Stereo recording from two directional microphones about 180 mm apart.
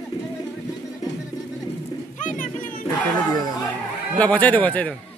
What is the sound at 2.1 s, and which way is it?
Pigeon, 45° left (ahead or behind).